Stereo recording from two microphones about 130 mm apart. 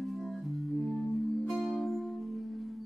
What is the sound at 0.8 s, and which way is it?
Music, centre (ahead or behind).